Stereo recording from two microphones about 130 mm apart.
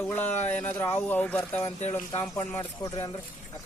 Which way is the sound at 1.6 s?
55° left (ahead or behind).